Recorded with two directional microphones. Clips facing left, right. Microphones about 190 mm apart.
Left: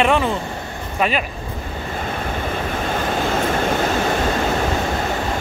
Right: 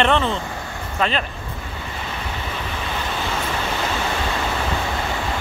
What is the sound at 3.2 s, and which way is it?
Vehicle, 50° left (ahead or behind).